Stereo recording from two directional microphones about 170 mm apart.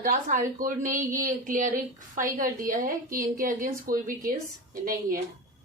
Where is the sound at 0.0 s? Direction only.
50° right (ahead or behind).